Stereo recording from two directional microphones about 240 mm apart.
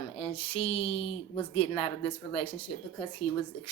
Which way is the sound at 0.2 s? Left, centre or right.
Left.